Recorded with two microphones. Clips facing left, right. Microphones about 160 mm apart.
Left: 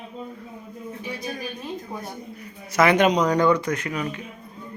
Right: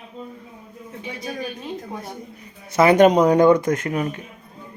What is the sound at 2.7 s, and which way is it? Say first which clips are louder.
Speech: right 3 dB; 30° right (ahead or behind).